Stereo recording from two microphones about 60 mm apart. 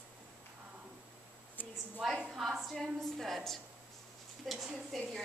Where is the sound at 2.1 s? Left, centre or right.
Centre.